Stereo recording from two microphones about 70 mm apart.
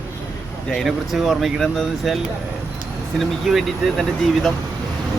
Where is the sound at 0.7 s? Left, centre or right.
Centre.